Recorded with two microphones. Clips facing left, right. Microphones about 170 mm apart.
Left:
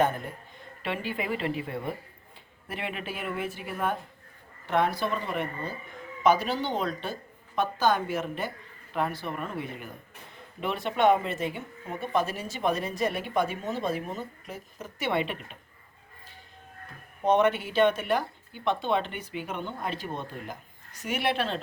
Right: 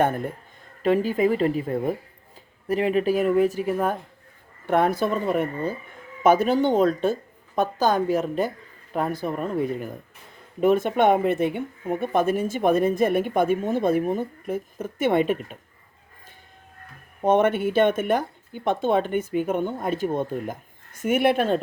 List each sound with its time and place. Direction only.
0.8 s speech: 40° right (ahead or behind)
17.2 s speech: 50° right (ahead or behind)